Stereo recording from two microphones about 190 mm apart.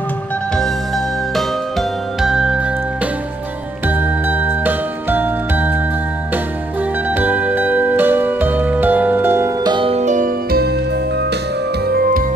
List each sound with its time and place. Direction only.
0.6 s music: centre (ahead or behind)
3.8 s jingle: 10° right (ahead or behind)
7.1 s music: 10° right (ahead or behind)
9.8 s music: 30° right (ahead or behind); by 10.7 s 50° right (ahead or behind)
11.9 s music: 50° right (ahead or behind)